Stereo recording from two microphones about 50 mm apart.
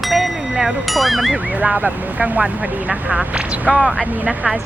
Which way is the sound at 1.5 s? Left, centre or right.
Right.